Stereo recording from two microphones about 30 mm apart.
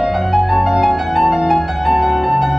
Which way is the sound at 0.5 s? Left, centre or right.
Centre.